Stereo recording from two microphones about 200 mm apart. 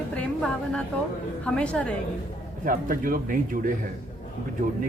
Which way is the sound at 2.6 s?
45° right (ahead or behind).